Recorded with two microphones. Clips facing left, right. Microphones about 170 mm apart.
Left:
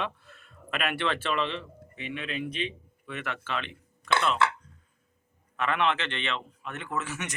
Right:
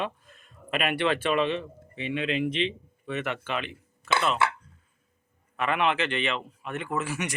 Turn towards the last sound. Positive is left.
turn(degrees=-10)  # may be behind; listen again after turning